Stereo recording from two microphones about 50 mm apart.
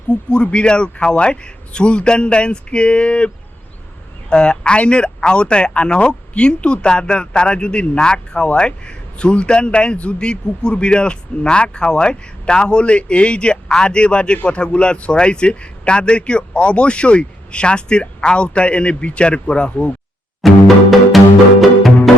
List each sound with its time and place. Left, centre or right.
0.1 s speech: centre
20.4 s music: centre